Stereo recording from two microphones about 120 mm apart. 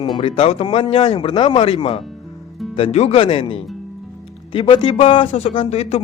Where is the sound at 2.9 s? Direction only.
60° left (ahead or behind).